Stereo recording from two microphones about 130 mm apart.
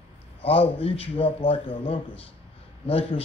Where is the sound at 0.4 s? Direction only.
50° left (ahead or behind).